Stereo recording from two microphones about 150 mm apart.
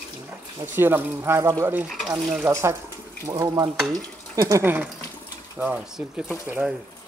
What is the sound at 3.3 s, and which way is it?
Stir, 25° right (ahead or behind).